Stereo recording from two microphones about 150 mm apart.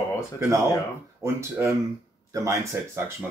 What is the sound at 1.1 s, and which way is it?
Speech, 20° right (ahead or behind).